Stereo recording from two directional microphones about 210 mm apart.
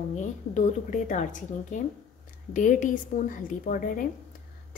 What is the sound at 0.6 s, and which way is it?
Speech, 35° left (ahead or behind).